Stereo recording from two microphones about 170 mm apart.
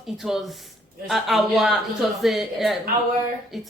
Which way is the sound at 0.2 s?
Centre (ahead or behind).